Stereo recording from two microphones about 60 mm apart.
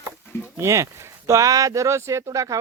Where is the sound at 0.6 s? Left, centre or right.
Right.